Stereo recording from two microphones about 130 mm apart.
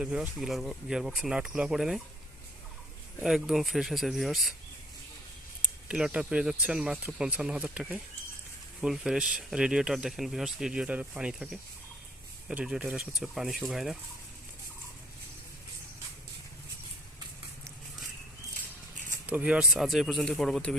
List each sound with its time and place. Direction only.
0.0 s speech: 5° right (ahead or behind)
3.2 s speech: 5° right (ahead or behind)
5.9 s speech: 10° right (ahead or behind)
12.5 s speech: 5° right (ahead or behind)
19.2 s speech: 10° right (ahead or behind)